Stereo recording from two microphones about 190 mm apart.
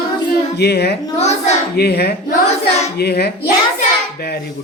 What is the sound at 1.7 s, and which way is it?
A man's voice, 60° left (ahead or behind).